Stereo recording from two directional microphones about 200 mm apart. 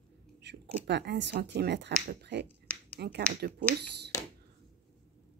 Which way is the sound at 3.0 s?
55° right (ahead or behind).